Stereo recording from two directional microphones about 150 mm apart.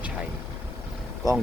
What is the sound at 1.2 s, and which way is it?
Speech, 25° right (ahead or behind).